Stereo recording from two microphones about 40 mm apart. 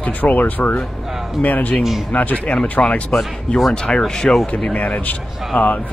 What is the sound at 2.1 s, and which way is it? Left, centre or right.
Speech, left.